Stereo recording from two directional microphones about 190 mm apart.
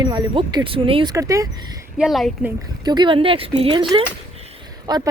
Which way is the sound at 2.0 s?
Centre (ahead or behind).